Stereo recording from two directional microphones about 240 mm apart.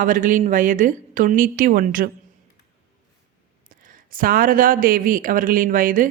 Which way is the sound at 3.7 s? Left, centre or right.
Right.